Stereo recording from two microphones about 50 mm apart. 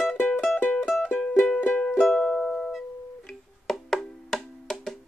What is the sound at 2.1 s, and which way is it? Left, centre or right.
Music, centre.